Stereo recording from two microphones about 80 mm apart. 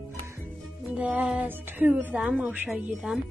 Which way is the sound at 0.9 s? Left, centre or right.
Centre.